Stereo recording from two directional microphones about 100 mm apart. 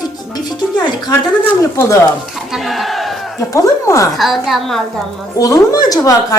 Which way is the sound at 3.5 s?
30° left (ahead or behind).